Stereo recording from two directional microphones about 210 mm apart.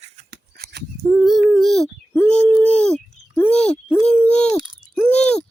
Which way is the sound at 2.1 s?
5° left (ahead or behind).